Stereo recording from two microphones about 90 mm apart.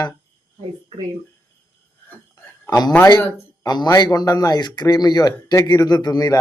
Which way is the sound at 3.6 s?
50° left (ahead or behind).